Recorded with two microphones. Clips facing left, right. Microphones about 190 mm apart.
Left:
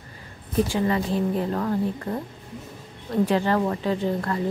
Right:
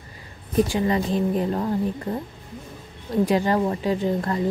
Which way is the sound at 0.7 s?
20° right (ahead or behind).